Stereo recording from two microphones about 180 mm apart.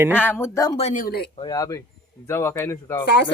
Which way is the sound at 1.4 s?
20° left (ahead or behind).